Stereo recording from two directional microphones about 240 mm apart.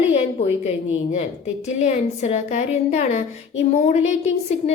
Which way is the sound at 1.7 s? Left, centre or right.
Left.